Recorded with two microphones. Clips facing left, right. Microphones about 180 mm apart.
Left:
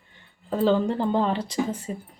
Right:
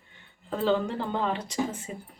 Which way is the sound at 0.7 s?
35° left (ahead or behind).